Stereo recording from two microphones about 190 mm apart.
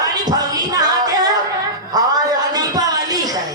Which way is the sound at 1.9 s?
20° right (ahead or behind).